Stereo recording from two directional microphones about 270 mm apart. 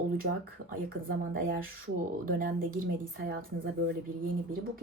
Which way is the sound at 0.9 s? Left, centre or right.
Right.